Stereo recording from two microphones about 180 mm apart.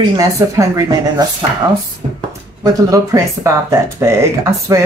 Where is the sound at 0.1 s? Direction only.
20° right (ahead or behind).